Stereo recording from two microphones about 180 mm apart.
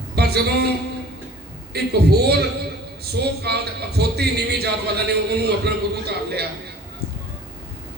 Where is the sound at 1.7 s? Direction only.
65° right (ahead or behind).